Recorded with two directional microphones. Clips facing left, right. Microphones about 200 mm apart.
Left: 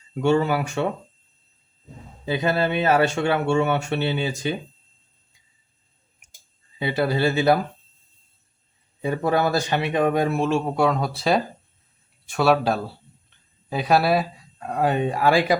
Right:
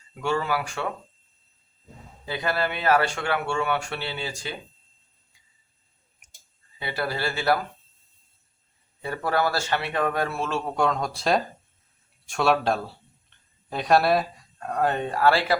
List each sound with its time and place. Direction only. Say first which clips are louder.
0.1 s speech: left 6 dB; 25° left (ahead or behind)
2.2 s speech: left 5 dB; 20° left (ahead or behind)
6.7 s speech: left 7 dB; 20° left (ahead or behind)
9.0 s speech: left 4 dB; 20° left (ahead or behind)